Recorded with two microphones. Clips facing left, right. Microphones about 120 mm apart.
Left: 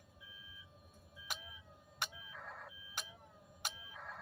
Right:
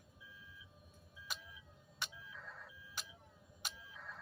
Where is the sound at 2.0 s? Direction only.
55° left (ahead or behind).